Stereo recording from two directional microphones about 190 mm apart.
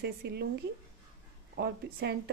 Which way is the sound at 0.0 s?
60° right (ahead or behind).